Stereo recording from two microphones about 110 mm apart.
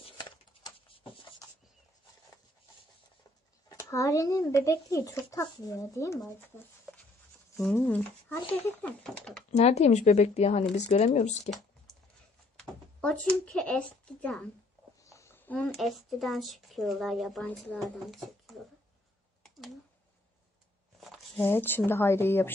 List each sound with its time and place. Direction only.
0.2 s a sound: 50° left (ahead or behind)
3.6 s speech: 30° left (ahead or behind)
7.5 s a woman's voice: centre (ahead or behind)
9.5 s speech: 80° left
12.5 s speech: 5° left (ahead or behind)
15.0 s a sound: 25° left (ahead or behind)
15.6 s a woman's voice: centre (ahead or behind)
21.0 s a sound: centre (ahead or behind)
21.5 s speech: 20° left (ahead or behind)